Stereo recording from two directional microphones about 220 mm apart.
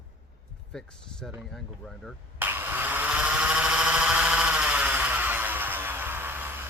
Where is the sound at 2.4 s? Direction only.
10° right (ahead or behind).